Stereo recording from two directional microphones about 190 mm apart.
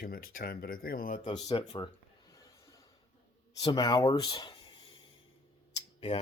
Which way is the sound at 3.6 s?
20° left (ahead or behind).